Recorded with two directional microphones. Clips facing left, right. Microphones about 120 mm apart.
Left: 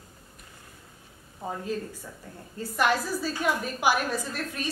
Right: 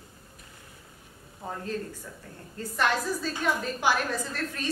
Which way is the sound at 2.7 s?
10° left (ahead or behind).